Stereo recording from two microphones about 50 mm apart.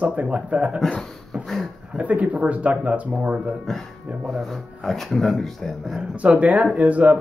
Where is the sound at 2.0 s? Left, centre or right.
Right.